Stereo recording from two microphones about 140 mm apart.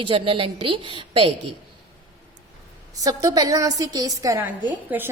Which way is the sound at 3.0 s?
25° right (ahead or behind).